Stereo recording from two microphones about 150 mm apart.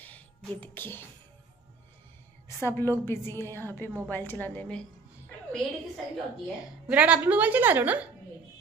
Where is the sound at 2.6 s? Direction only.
15° left (ahead or behind).